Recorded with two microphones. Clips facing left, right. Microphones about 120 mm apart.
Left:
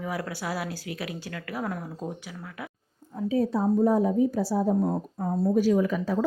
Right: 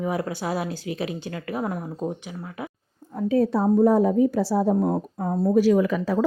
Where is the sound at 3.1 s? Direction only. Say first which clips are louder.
Right 4 dB; 70° right (ahead or behind).